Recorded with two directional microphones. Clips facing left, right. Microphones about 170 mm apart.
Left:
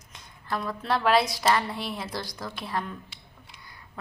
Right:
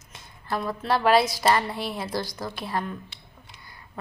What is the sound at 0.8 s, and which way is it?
A woman's voice, 5° right (ahead or behind).